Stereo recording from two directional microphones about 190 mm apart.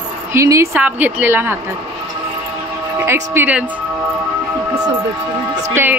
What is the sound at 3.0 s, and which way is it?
Speech, 15° right (ahead or behind).